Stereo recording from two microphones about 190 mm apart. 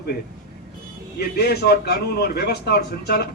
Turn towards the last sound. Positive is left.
turn(degrees=55)  # may be behind; listen again after turning